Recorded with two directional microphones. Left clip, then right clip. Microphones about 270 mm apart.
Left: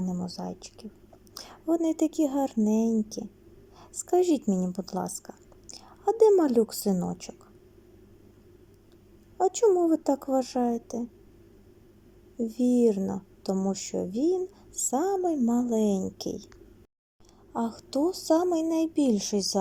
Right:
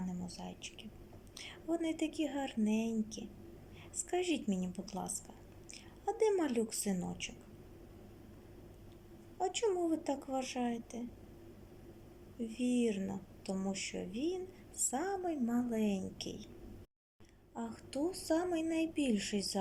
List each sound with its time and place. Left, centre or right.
0.3 s a woman's voice: centre
6.1 s a woman's voice: centre
9.4 s a woman's voice: centre
12.4 s a woman's voice: centre
17.5 s a woman's voice: centre
17.7 s a woman's voice: centre